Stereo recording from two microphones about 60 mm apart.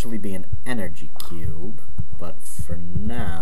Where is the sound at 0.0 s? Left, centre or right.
Centre.